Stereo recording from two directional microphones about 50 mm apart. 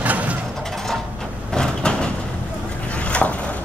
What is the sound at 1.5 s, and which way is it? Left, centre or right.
Sliding door, centre.